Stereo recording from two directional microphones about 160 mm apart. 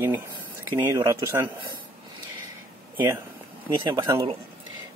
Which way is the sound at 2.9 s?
15° right (ahead or behind).